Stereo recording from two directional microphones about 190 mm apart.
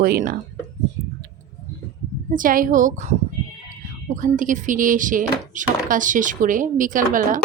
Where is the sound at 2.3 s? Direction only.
45° right (ahead or behind).